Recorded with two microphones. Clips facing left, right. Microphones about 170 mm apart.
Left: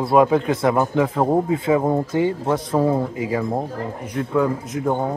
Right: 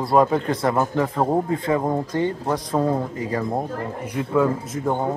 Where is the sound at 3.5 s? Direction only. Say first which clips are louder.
Left 1 dB; 5° right (ahead or behind).